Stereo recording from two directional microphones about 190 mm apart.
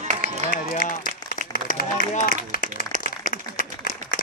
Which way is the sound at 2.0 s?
45° left (ahead or behind).